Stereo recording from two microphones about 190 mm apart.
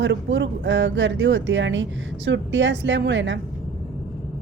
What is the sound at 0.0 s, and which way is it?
A woman's voice, 70° right (ahead or behind).